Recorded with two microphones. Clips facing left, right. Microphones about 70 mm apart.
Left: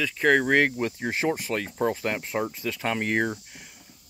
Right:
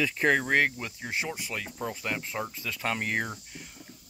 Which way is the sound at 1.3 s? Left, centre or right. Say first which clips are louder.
Left 8 dB; left.